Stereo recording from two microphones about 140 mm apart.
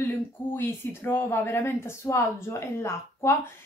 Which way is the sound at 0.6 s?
15° left (ahead or behind).